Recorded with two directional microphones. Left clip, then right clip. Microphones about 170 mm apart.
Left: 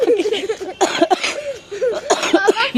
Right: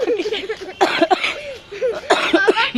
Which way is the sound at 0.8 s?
45° left (ahead or behind).